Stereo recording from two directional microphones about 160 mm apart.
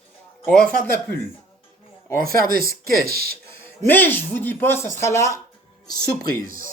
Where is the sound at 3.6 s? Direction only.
15° left (ahead or behind).